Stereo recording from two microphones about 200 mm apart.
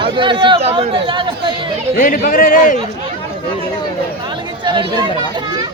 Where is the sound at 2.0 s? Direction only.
45° left (ahead or behind).